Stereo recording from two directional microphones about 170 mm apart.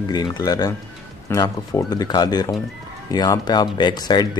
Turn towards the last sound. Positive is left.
turn(degrees=25)  # may be behind; listen again after turning